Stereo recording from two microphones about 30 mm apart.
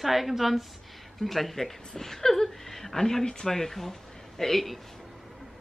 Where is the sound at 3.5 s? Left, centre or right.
Centre.